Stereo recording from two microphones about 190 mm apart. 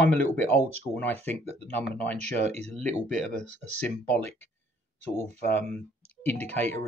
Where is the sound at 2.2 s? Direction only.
35° right (ahead or behind).